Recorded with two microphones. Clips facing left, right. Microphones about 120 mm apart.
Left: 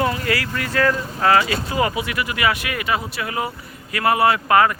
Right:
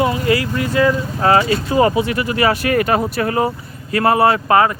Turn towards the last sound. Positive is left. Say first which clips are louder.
# right 2 dB
turn(degrees=-30)  # may be behind; listen again after turning